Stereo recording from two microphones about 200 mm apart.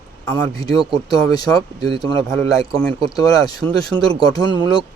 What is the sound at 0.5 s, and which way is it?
Speech, 20° left (ahead or behind).